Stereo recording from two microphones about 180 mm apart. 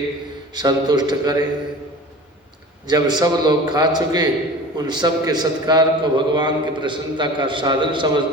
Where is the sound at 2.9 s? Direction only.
25° right (ahead or behind).